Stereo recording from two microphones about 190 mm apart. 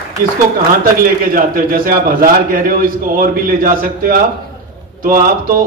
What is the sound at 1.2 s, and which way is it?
A man's voice, 50° right (ahead or behind).